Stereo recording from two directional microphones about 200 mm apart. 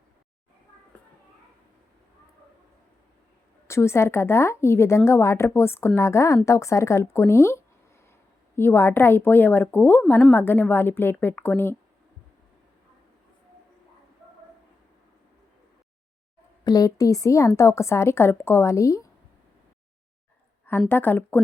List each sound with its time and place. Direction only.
3.7 s speech: 15° left (ahead or behind)
16.6 s speech: 20° left (ahead or behind)
20.7 s speech: 10° left (ahead or behind)